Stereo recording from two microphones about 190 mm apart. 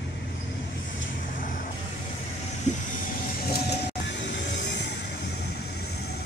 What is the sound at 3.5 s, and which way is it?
Music, 65° left (ahead or behind).